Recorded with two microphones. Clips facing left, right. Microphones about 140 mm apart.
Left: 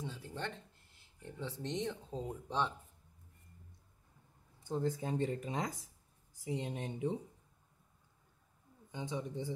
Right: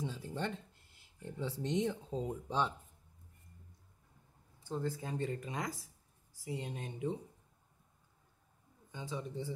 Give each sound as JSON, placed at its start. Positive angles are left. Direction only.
{"t": 0.0, "sound": "speech", "side_deg": -10}
{"t": 4.6, "sound": "speech", "side_deg": 20}
{"t": 8.9, "sound": "a man's voice", "side_deg": 15}